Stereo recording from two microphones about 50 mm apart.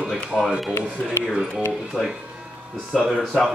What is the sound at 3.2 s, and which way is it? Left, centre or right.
Speech, centre.